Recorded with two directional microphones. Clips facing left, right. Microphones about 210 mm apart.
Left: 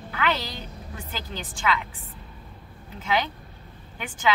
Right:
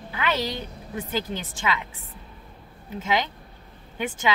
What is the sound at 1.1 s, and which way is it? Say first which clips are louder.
Speech: right 7 dB; 20° right (ahead or behind).